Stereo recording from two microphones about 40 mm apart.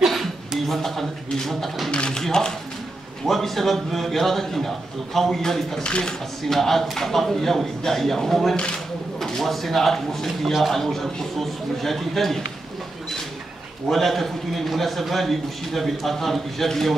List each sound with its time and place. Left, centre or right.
0.0 s a sound: centre
0.7 s a man's voice: centre
1.9 s speech: left
3.3 s a man's voice: centre
5.9 s speech: left
6.5 s speech: centre
8.5 s speech: left
9.2 s a man's voice: centre
13.8 s a man's voice: centre